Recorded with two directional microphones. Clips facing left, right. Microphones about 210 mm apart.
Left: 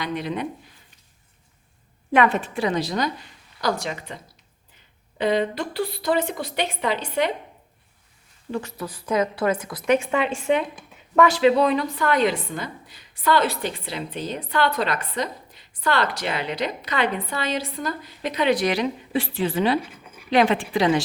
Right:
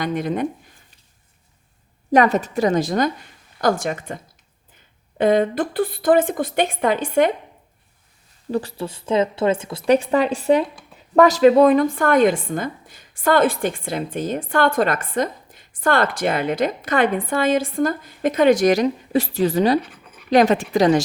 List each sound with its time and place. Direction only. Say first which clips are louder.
0.0 s speech: right 5 dB; 45° right (ahead or behind)
2.1 s a woman's voice: right 4 dB; 40° right (ahead or behind)
8.4 s a woman's voice: right 5 dB; 35° right (ahead or behind)